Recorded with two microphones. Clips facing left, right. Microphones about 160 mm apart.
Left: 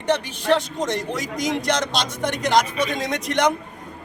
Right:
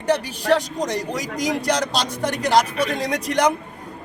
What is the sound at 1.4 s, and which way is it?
Speech, 35° right (ahead or behind).